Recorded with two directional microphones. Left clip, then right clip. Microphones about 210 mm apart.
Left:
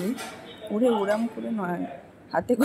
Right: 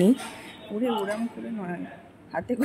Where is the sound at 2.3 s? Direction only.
15° left (ahead or behind).